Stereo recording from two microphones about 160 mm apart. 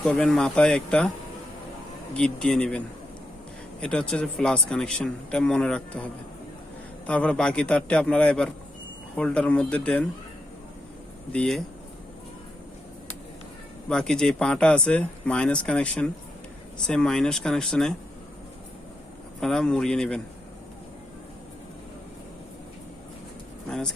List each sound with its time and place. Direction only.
0.0 s speech: 5° left (ahead or behind)
2.1 s speech: 5° left (ahead or behind)
7.1 s speech: 10° left (ahead or behind)
11.3 s speech: 5° left (ahead or behind)
13.8 s speech: 5° left (ahead or behind)
19.4 s speech: 5° left (ahead or behind)
23.6 s speech: 5° left (ahead or behind)